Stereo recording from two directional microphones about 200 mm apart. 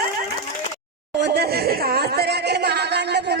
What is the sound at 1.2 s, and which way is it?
Speech, 55° right (ahead or behind).